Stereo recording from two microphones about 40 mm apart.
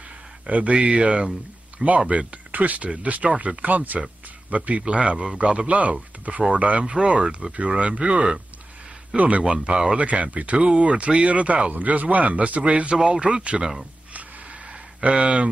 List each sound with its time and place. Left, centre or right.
0.5 s a man's voice: right
3.6 s speech: right
4.8 s a man's voice: right
5.7 s a man's voice: right
9.4 s a man's voice: right
9.9 s speech: right
12.9 s a man's voice: right
14.1 s a sound: right